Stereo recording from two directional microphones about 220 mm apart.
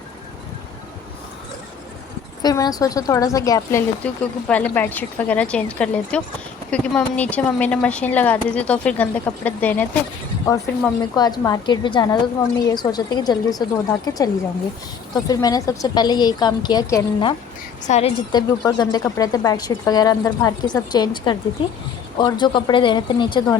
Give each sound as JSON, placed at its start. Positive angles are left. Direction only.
{"t": 2.4, "sound": "a woman's voice", "side_deg": 15}
{"t": 17.8, "sound": "a woman's voice", "side_deg": 30}
{"t": 18.3, "sound": "a woman's voice", "side_deg": 20}